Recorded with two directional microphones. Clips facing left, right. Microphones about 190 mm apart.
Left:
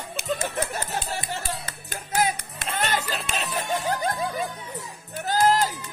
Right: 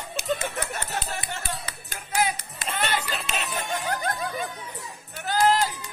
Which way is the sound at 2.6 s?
Centre (ahead or behind).